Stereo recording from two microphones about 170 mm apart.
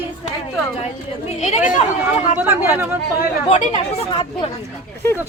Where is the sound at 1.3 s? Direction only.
40° left (ahead or behind).